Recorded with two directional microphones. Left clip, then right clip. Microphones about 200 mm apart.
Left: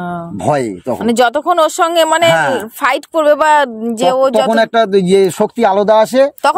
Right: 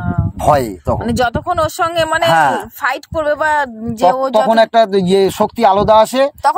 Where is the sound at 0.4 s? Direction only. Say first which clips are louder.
Right 2 dB; 30° right (ahead or behind).